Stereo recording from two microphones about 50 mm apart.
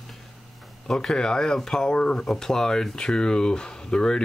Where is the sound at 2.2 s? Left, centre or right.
Centre.